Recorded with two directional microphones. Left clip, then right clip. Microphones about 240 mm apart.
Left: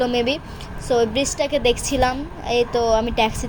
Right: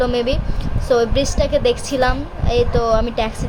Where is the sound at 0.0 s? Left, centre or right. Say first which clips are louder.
Right 2 dB; centre.